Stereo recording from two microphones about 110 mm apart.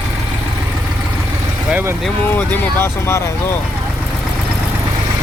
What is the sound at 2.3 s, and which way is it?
Speech, 20° left (ahead or behind).